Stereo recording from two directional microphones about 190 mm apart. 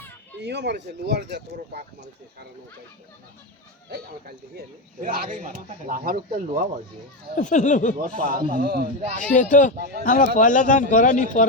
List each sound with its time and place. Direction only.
0.4 s speech: 65° right (ahead or behind)
3.8 s speech: 55° right (ahead or behind)
7.3 s speech: 40° left (ahead or behind)
7.9 s speech: 45° right (ahead or behind)
9.3 s speech: 40° left (ahead or behind)